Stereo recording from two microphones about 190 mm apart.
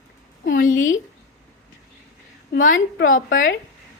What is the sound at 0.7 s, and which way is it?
Speech, 90° left.